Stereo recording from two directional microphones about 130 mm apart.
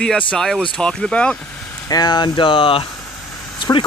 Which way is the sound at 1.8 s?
30° left (ahead or behind).